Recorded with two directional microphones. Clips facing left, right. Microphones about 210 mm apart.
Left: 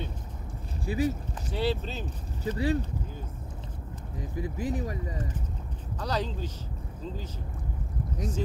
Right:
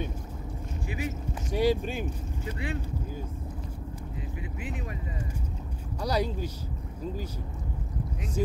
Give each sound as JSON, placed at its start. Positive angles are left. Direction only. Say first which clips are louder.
{"t": 0.8, "sound": "speech", "louder": "left 7 dB", "side_deg": 35}
{"t": 1.5, "sound": "speech", "louder": "right 4 dB", "side_deg": -15}
{"t": 2.4, "sound": "speech", "louder": "left 8 dB", "side_deg": 35}
{"t": 4.4, "sound": "speech", "louder": "left 9 dB", "side_deg": 35}
{"t": 5.9, "sound": "speech", "louder": "right 3 dB", "side_deg": -10}